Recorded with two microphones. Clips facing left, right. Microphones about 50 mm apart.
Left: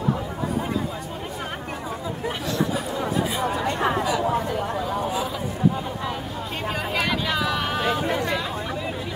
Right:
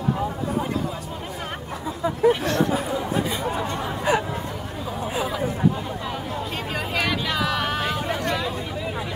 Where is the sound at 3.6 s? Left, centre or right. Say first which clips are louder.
Left 5 dB; left.